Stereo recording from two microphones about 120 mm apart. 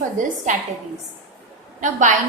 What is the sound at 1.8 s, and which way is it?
Speech, 90° right.